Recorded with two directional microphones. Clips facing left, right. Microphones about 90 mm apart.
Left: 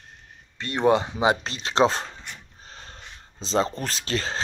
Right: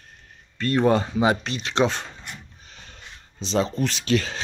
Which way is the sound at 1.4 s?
35° left (ahead or behind).